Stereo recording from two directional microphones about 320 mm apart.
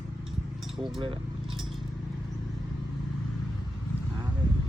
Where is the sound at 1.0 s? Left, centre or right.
Centre.